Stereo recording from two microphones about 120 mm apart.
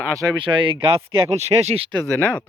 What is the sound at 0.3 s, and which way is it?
Speech, 45° right (ahead or behind).